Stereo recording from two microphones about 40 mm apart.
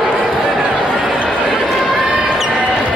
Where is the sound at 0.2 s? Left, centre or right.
Right.